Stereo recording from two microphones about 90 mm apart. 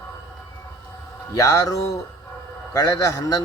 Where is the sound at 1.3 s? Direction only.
35° left (ahead or behind).